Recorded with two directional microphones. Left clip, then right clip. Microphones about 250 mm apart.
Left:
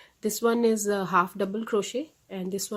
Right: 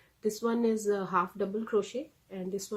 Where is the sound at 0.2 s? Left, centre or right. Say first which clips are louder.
Left 6 dB; left.